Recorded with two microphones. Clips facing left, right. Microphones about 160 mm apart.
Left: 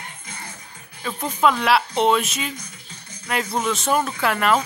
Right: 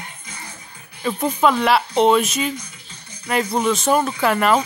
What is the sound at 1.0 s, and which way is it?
A woman's voice, 5° right (ahead or behind).